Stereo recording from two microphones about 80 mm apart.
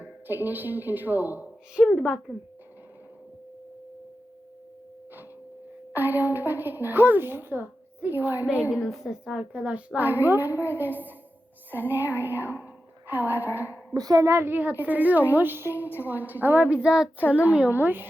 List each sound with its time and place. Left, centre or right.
0.0 s a woman's voice: right
1.9 s speech: centre
5.9 s a woman's voice: right
8.7 s a woman's voice: centre; by 12.5 s right
12.6 s a sound: right
13.9 s a child's voice: right
14.3 s a woman's voice: right